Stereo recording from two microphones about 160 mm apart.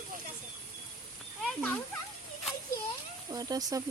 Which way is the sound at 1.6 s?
10° left (ahead or behind).